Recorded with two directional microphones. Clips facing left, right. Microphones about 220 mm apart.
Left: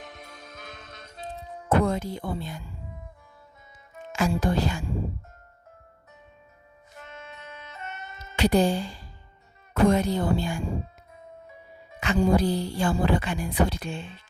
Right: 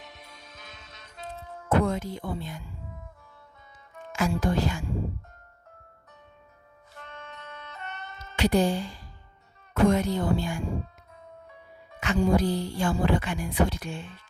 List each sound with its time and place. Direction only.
0.0 s music: 50° left (ahead or behind)
1.2 s music: 15° left (ahead or behind)
1.7 s speech: 35° left (ahead or behind)
3.9 s speech: 25° left (ahead or behind)
6.9 s music: 10° left (ahead or behind)
8.4 s speech: 35° left (ahead or behind)
11.9 s speech: 30° left (ahead or behind)